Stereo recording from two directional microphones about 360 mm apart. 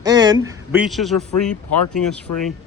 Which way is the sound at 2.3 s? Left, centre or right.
Left.